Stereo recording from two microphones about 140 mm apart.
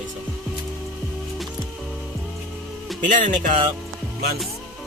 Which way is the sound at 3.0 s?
65° right (ahead or behind).